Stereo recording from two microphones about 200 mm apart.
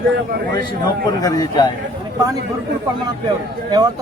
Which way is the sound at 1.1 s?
20° left (ahead or behind).